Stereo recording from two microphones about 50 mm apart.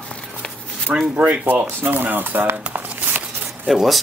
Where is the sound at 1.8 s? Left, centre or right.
Right.